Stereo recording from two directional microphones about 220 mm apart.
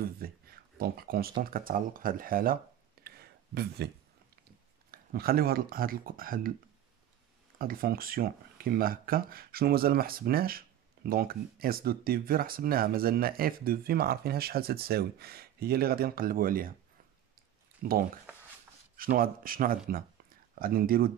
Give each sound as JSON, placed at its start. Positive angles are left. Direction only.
{"t": 0.0, "sound": "speech", "side_deg": -40}
{"t": 4.9, "sound": "speech", "side_deg": -45}
{"t": 7.5, "sound": "speech", "side_deg": -40}
{"t": 17.8, "sound": "speech", "side_deg": -40}